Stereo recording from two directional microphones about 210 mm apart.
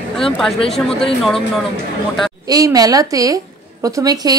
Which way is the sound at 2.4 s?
15° right (ahead or behind).